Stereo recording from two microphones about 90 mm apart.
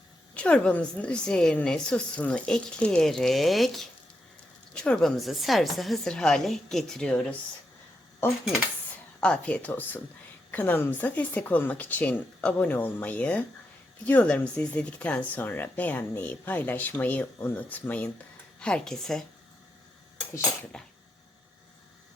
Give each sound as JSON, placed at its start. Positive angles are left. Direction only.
{"t": 0.3, "sound": "a woman's voice", "side_deg": 10}
{"t": 8.2, "sound": "speech", "side_deg": 25}
{"t": 9.2, "sound": "speech", "side_deg": 15}
{"t": 18.6, "sound": "a woman's voice", "side_deg": 5}
{"t": 20.7, "sound": "speech", "side_deg": 10}